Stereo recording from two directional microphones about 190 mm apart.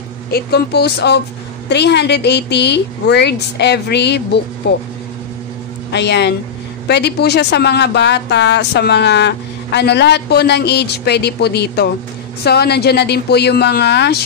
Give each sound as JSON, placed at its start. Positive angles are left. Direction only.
{"t": 0.3, "sound": "speech", "side_deg": 55}
{"t": 5.9, "sound": "speech", "side_deg": 65}